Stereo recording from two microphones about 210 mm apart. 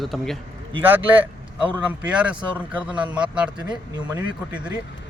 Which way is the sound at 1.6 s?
5° right (ahead or behind).